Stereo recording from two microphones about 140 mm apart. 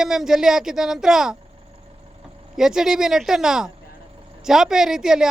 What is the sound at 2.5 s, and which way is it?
A woman's voice, 5° right (ahead or behind).